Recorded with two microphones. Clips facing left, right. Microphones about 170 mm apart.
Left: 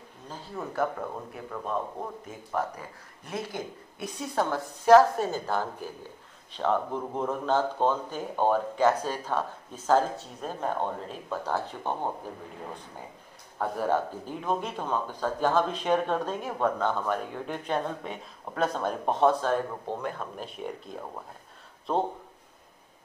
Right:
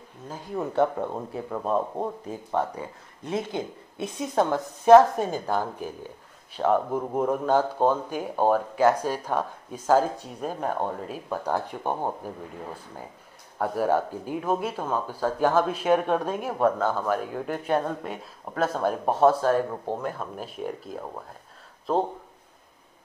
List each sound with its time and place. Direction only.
0.3 s speech: 15° right (ahead or behind)
0.7 s speech: 25° right (ahead or behind)
13.6 s speech: 10° right (ahead or behind)